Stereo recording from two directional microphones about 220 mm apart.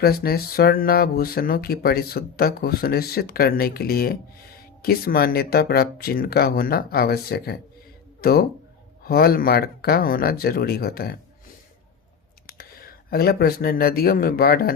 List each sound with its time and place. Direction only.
0.0 s speech: 45° left (ahead or behind)
12.5 s speech: 45° left (ahead or behind)